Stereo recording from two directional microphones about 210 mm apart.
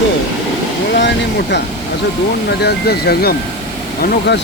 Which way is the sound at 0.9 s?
55° left (ahead or behind).